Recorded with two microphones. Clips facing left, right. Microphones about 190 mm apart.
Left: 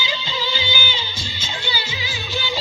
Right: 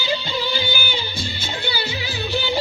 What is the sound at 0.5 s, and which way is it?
Music, 55° right (ahead or behind).